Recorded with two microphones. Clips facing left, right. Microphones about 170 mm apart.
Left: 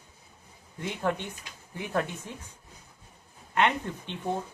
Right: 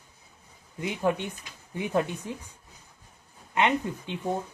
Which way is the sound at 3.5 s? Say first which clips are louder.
Right 1 dB; 15° right (ahead or behind).